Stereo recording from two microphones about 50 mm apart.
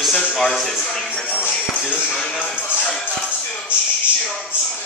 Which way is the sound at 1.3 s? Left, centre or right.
Left.